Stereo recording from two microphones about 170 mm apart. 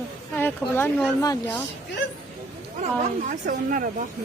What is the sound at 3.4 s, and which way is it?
Speech, 55° right (ahead or behind).